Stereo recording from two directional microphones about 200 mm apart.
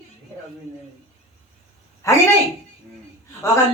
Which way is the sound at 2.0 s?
15° left (ahead or behind).